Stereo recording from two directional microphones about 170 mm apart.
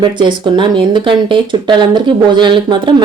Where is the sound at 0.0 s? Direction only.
25° right (ahead or behind).